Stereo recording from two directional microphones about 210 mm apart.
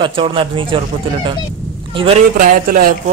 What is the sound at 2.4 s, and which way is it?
Speech, 40° right (ahead or behind).